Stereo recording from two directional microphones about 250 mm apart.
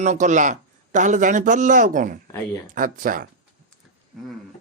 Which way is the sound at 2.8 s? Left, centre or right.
Right.